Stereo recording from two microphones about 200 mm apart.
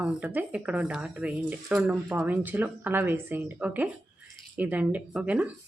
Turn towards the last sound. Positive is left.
turn(degrees=-5)  # may be behind; listen again after turning